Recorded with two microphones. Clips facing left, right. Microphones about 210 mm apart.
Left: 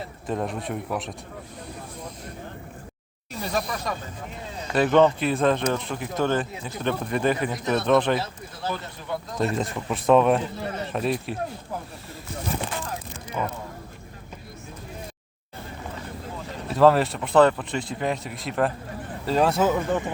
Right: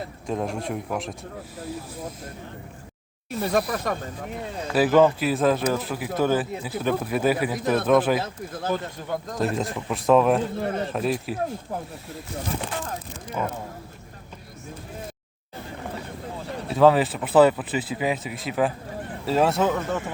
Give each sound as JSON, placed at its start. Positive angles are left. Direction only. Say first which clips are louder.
{"t": 0.3, "sound": "speech", "louder": "right 1 dB", "side_deg": 0}
{"t": 3.4, "sound": "speech", "louder": "right 4 dB", "side_deg": -55}
{"t": 4.7, "sound": "speech", "louder": "right 1 dB", "side_deg": -5}
{"t": 8.2, "sound": "speech", "louder": "right 2 dB", "side_deg": -50}
{"t": 9.6, "sound": "speech", "louder": "even", "side_deg": 0}
{"t": 10.6, "sound": "speech", "louder": "right 4 dB", "side_deg": -50}
{"t": 10.9, "sound": "speech", "louder": "right 1 dB", "side_deg": 0}
{"t": 16.6, "sound": "speech", "louder": "even", "side_deg": 0}